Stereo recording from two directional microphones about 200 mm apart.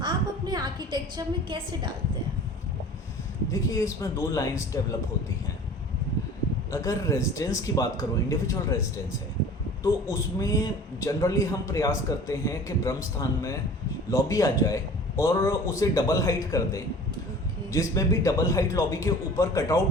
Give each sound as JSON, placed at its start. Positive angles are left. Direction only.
{"t": 0.0, "sound": "a sound", "side_deg": -20}
{"t": 3.5, "sound": "a man's voice", "side_deg": 15}
{"t": 6.7, "sound": "a man's voice", "side_deg": 15}